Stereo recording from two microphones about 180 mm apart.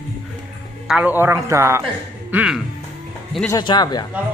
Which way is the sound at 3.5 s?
25° left (ahead or behind).